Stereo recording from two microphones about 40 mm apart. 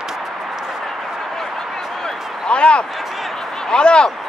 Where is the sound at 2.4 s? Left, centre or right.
Left.